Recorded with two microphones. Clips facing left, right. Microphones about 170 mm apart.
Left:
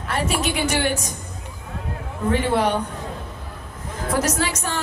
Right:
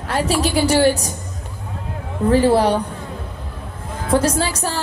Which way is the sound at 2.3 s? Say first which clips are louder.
Right 6 dB; 35° right (ahead or behind).